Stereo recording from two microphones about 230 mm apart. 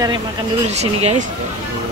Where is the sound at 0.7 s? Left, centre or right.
Right.